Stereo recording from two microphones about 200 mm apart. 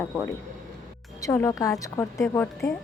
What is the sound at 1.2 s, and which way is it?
A woman's voice, 15° left (ahead or behind).